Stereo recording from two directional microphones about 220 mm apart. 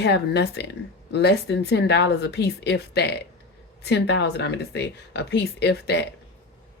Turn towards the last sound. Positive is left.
turn(degrees=50)  # may be behind; listen again after turning